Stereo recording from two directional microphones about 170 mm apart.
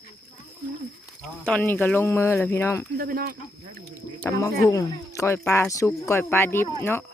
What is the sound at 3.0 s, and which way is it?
Speech, 60° right (ahead or behind).